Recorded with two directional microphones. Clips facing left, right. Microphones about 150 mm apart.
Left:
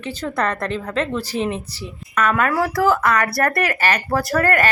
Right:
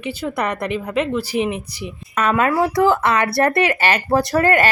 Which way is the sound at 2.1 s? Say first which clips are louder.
Right 1 dB; 25° right (ahead or behind).